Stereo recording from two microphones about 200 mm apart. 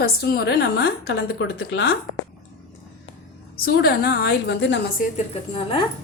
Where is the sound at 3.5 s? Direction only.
50° left (ahead or behind).